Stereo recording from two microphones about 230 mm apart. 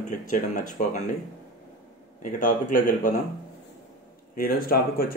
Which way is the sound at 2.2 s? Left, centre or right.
Left.